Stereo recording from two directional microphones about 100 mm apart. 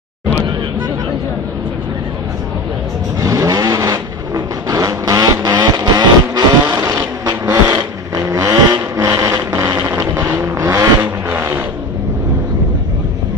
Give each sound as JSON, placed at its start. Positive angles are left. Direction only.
{"t": 3.2, "sound": "vehicle", "side_deg": -35}
{"t": 11.0, "sound": "vehicle", "side_deg": -15}